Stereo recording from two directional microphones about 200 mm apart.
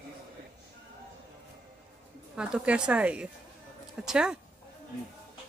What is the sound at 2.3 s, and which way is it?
A woman's voice, 5° right (ahead or behind).